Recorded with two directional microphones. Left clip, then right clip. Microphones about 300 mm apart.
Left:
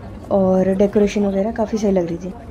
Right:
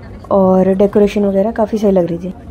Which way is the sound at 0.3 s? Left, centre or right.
Centre.